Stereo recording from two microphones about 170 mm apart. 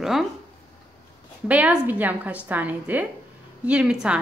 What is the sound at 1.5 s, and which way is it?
A woman's voice, 10° right (ahead or behind).